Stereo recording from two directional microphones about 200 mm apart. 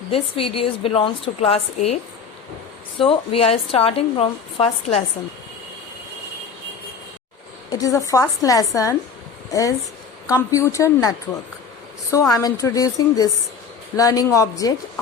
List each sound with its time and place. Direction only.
0.1 s a woman's voice: 30° left (ahead or behind)
3.0 s a woman's voice: 30° left (ahead or behind)
7.7 s a woman's voice: 15° left (ahead or behind)
12.1 s a woman's voice: 15° left (ahead or behind)